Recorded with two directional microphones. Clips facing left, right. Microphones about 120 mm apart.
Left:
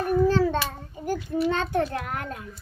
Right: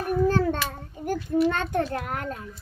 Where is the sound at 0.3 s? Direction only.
50° right (ahead or behind).